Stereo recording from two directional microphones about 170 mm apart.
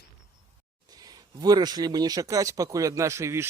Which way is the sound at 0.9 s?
20° right (ahead or behind).